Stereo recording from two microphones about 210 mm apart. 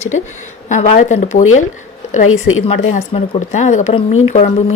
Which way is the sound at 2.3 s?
80° left.